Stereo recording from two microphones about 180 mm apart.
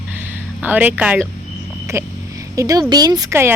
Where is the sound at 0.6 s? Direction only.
10° right (ahead or behind).